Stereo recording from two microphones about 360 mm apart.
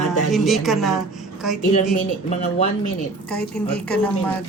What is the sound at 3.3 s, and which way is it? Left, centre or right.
Speech, centre.